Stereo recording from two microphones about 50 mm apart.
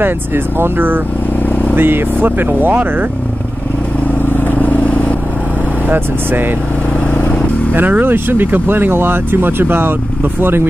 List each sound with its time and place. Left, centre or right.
0.6 s speech: right
4.4 s vehicle: left
7.7 s speech: right